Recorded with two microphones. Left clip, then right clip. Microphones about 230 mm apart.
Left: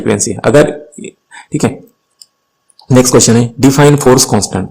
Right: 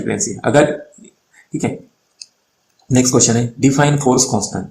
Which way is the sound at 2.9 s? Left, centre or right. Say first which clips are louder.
Left 7 dB; left.